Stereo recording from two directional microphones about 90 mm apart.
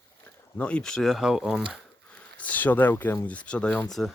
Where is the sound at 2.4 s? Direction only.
20° left (ahead or behind).